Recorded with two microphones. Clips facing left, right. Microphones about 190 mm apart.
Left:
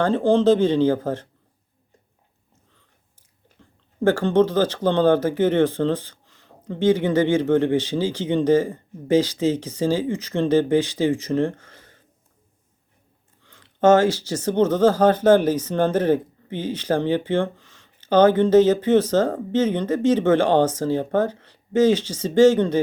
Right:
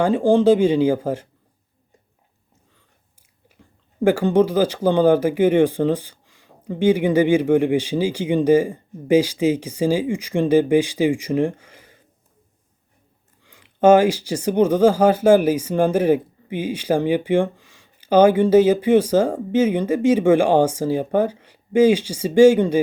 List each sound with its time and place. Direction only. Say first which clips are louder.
0.0 s speech: right 2 dB; 10° right (ahead or behind)
3.6 s speech: right 2 dB; 10° right (ahead or behind)
13.4 s speech: right 2 dB; 10° right (ahead or behind)